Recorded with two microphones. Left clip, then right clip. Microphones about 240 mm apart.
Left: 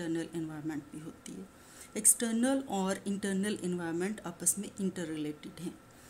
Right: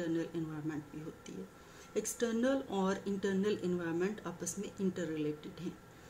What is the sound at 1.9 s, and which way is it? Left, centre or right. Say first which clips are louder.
Speech: left 2 dB; left.